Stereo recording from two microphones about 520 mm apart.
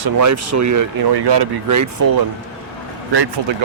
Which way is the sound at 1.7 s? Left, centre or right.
Right.